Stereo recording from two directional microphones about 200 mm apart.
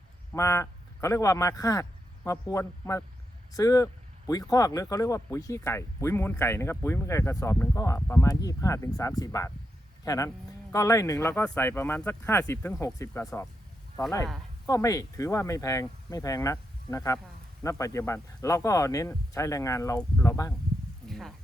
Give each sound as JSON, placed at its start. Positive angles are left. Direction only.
{"t": 0.3, "sound": "speech", "side_deg": 15}
{"t": 14.7, "sound": "speech", "side_deg": 15}
{"t": 21.1, "sound": "a sound", "side_deg": 0}